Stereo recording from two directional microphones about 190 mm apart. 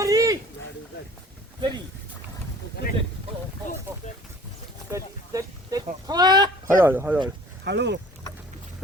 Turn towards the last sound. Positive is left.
turn(degrees=-65)  # may be behind; listen again after turning